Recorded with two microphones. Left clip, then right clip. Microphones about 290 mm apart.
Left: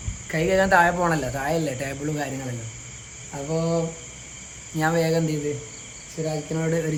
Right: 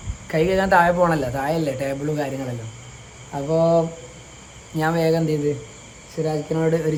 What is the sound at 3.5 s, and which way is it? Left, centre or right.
Speech, centre.